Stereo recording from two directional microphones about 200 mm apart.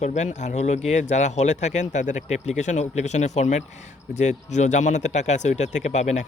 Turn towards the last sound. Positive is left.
turn(degrees=35)  # may be behind; listen again after turning